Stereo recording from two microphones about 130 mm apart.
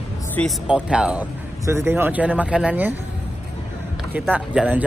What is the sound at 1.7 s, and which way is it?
Speech, 20° right (ahead or behind).